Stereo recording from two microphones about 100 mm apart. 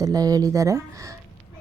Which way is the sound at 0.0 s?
40° right (ahead or behind).